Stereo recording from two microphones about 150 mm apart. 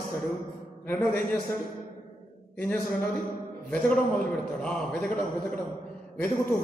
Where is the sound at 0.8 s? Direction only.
10° left (ahead or behind).